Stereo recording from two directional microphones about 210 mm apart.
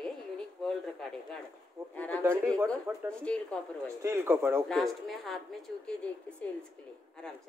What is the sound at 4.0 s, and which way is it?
Speech, 15° right (ahead or behind).